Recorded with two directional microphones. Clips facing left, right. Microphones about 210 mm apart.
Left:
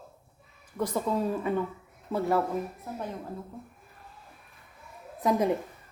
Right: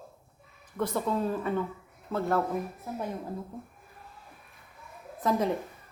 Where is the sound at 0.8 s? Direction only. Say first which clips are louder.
Left 1 dB; 10° left (ahead or behind).